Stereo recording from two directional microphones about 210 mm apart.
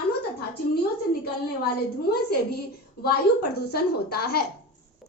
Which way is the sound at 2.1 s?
50° left (ahead or behind).